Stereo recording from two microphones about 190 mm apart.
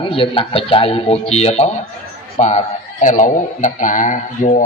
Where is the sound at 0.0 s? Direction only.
30° left (ahead or behind).